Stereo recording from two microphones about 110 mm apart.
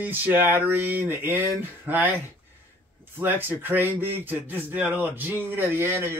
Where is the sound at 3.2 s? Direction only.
15° right (ahead or behind).